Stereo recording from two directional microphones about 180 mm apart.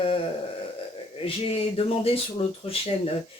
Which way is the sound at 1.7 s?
30° left (ahead or behind).